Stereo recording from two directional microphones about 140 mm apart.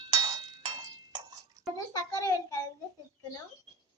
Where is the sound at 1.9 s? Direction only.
20° left (ahead or behind).